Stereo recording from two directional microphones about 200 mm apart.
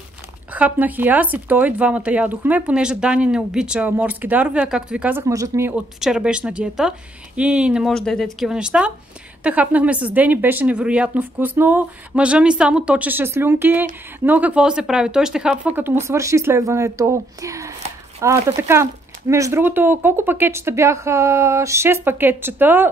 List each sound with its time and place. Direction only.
0.5 s speech: 5° right (ahead or behind)
5.9 s a woman's voice: 5° right (ahead or behind)